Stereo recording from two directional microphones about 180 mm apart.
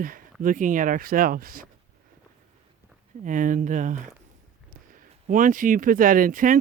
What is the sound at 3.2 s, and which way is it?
Speech, 45° right (ahead or behind).